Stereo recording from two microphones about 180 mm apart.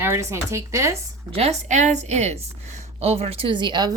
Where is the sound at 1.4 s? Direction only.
40° right (ahead or behind).